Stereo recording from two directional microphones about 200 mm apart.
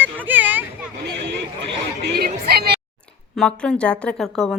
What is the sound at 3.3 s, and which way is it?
Speech, 5° left (ahead or behind).